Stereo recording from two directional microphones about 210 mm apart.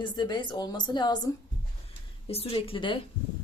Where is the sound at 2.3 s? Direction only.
30° left (ahead or behind).